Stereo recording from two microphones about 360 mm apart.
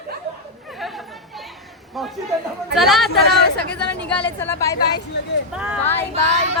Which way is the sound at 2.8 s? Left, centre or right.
Centre.